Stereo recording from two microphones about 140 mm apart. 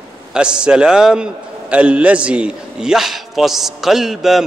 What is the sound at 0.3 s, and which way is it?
A man's voice, 5° right (ahead or behind).